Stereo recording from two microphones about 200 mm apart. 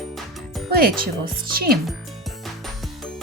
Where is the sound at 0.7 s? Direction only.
50° right (ahead or behind).